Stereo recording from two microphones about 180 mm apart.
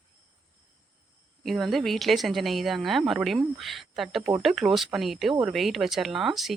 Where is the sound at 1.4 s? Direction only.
Centre (ahead or behind).